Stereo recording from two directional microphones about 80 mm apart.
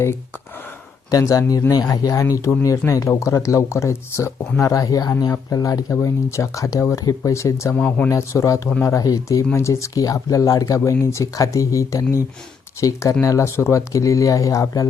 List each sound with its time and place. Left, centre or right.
1.1 s speech: left
7.8 s speech: centre
8.1 s speech: left
9.5 s speech: left